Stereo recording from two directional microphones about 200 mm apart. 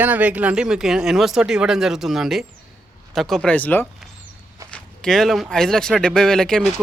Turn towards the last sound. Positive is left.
turn(degrees=5)  # may be behind; listen again after turning